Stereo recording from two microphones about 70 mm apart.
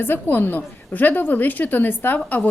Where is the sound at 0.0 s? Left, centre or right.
Left.